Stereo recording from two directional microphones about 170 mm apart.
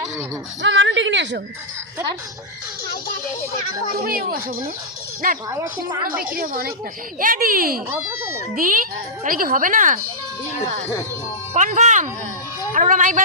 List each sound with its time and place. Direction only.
0.6 s a woman's voice: 90° right
3.9 s speech: 60° right (ahead or behind)
5.5 s a woman's voice: 20° right (ahead or behind)
6.3 s speech: 55° right (ahead or behind)
11.5 s speech: 50° right (ahead or behind)